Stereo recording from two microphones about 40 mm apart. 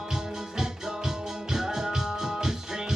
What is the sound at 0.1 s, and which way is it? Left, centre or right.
Music, centre.